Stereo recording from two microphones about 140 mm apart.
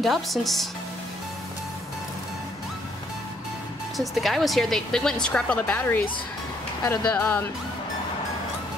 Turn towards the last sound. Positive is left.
turn(degrees=10)  # may be behind; listen again after turning